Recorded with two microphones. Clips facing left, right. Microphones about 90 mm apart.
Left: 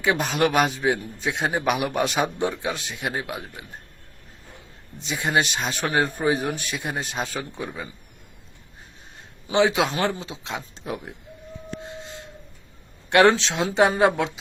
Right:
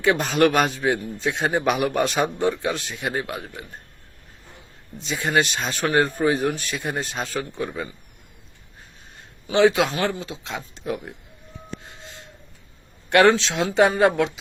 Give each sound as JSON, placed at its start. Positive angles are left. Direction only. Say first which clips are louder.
{"t": 0.0, "sound": "a man's voice", "louder": "right 3 dB", "side_deg": 10}
{"t": 2.7, "sound": "speech", "louder": "right 2 dB", "side_deg": 15}
{"t": 5.1, "sound": "speech", "louder": "right 1 dB", "side_deg": 10}
{"t": 9.6, "sound": "speech", "louder": "right 4 dB", "side_deg": 15}
{"t": 9.9, "sound": "speech", "louder": "even", "side_deg": 25}
{"t": 13.1, "sound": "speech", "louder": "right 1 dB", "side_deg": 25}